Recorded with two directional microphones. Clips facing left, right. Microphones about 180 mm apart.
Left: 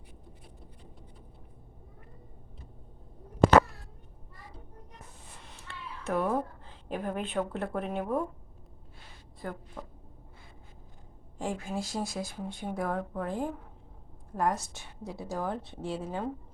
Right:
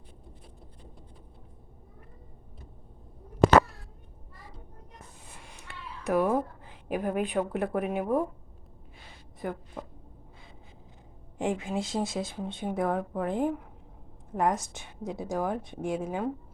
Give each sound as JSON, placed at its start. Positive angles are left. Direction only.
{"t": 5.4, "sound": "speech", "side_deg": -10}
{"t": 9.4, "sound": "a woman's voice", "side_deg": -15}
{"t": 11.3, "sound": "a woman's voice", "side_deg": -20}